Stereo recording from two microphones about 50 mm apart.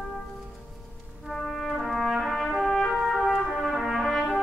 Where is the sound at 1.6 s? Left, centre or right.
Centre.